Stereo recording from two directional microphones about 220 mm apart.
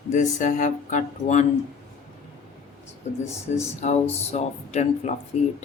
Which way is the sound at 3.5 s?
30° left (ahead or behind).